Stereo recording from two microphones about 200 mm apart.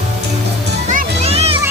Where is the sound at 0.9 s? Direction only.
35° right (ahead or behind).